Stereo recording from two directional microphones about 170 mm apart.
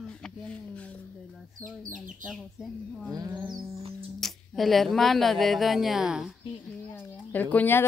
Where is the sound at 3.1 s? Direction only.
20° right (ahead or behind).